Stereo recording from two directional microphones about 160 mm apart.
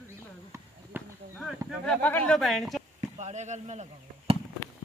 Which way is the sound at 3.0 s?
45° right (ahead or behind).